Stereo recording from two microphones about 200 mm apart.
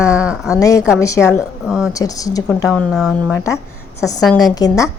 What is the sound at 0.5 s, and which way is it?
Speech, 15° left (ahead or behind).